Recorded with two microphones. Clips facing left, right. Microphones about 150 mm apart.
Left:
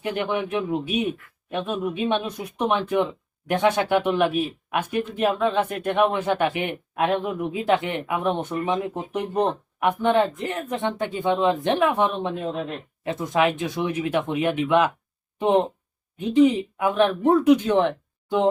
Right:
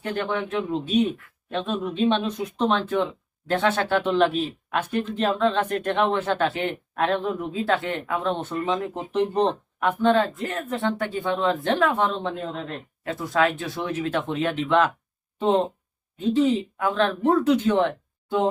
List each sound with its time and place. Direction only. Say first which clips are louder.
0.0 s speech: left 1 dB; 15° left (ahead or behind)